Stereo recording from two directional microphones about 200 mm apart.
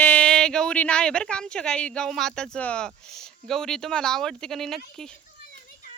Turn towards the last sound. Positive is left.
turn(degrees=0)  # may be behind; listen again after turning